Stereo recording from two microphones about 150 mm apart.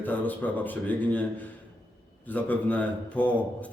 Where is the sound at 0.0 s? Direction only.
10° left (ahead or behind).